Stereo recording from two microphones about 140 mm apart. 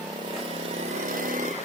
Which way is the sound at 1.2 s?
70° right (ahead or behind).